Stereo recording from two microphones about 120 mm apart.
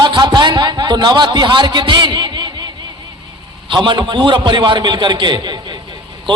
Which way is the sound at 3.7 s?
40° right (ahead or behind).